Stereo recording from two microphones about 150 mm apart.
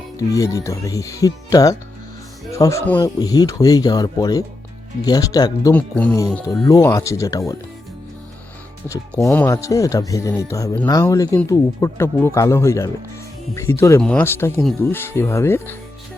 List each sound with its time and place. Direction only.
0.2 s speech: 25° left (ahead or behind)
5.7 s speech: 10° left (ahead or behind)
6.7 s speech: 20° left (ahead or behind)
9.2 s speech: 15° left (ahead or behind)